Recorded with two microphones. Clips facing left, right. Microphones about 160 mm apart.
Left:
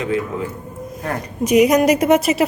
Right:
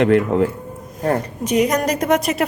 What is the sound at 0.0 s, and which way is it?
Speech, 65° right (ahead or behind).